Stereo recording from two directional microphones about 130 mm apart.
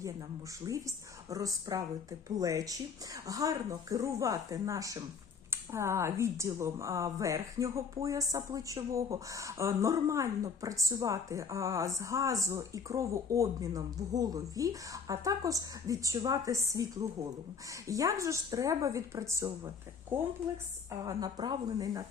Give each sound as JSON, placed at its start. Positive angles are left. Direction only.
{"t": 0.6, "sound": "a woman's voice", "side_deg": -25}
{"t": 21.0, "sound": "a woman's voice", "side_deg": -30}